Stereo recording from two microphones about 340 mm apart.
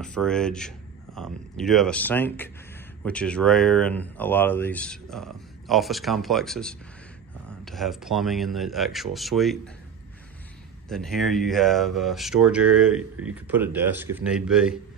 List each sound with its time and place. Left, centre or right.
0.0 s speech: centre
10.9 s speech: centre